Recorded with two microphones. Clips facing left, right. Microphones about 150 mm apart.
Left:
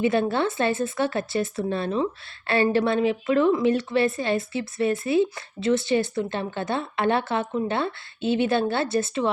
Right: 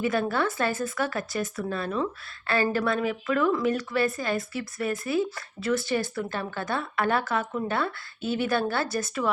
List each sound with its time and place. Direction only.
0.0 s speech: 25° left (ahead or behind)